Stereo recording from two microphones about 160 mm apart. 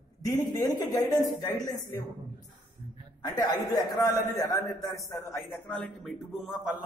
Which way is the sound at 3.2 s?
20° left (ahead or behind).